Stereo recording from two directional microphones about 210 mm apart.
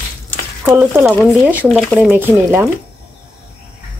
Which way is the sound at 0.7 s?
10° right (ahead or behind).